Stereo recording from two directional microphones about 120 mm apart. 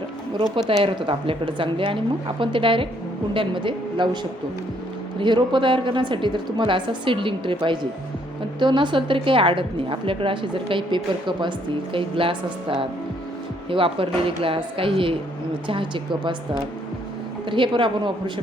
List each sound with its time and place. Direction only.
0.8 s a woman's voice: 45° right (ahead or behind)
17.5 s a woman's voice: 45° right (ahead or behind)